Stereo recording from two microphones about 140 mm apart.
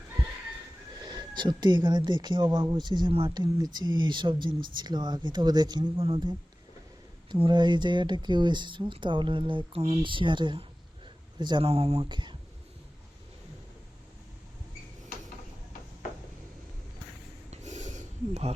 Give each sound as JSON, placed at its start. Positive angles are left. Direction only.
{"t": 1.0, "sound": "speech", "side_deg": -30}
{"t": 12.0, "sound": "speech", "side_deg": -35}
{"t": 17.5, "sound": "snort", "side_deg": -55}